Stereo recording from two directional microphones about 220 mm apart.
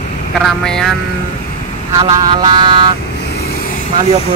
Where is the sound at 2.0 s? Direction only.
20° right (ahead or behind).